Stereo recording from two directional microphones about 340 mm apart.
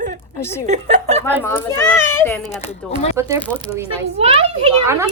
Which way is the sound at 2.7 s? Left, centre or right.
Centre.